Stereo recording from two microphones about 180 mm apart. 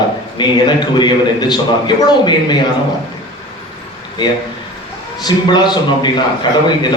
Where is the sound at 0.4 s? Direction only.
25° left (ahead or behind).